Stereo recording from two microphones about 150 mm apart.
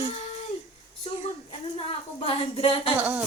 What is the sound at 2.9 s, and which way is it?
Speech, 10° right (ahead or behind).